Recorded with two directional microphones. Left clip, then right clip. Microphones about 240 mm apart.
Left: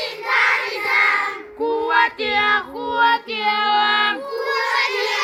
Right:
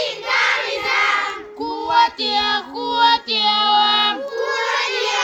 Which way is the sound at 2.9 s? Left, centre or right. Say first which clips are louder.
Right 2 dB; right.